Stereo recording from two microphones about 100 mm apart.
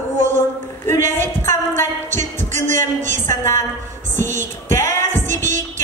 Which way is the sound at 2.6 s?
25° left (ahead or behind).